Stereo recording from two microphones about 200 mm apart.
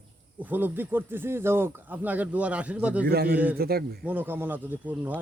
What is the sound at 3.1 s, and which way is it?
Speech, 50° right (ahead or behind).